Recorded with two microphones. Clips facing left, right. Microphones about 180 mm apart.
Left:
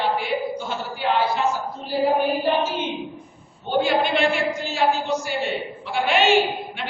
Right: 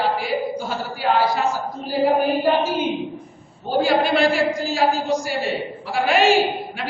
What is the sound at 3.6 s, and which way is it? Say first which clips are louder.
Speech: right 2 dB; 35° right (ahead or behind).